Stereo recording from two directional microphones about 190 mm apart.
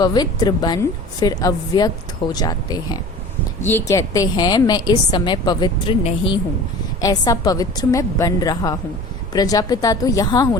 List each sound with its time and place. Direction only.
0.0 s a woman's voice: 20° left (ahead or behind)